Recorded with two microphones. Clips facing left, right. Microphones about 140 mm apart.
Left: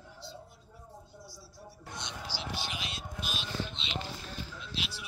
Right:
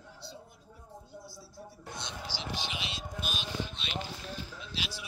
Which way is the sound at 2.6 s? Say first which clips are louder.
Right 1 dB; 45° left (ahead or behind).